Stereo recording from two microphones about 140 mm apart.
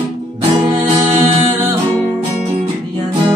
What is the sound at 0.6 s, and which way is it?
Music, 30° right (ahead or behind).